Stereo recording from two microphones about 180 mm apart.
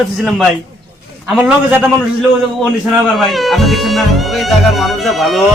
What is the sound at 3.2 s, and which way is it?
Speech, centre (ahead or behind).